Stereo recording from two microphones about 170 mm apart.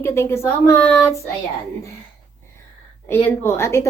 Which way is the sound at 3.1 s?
15° left (ahead or behind).